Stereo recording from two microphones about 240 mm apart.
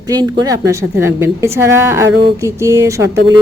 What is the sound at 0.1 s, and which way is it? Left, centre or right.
A woman's voice, centre.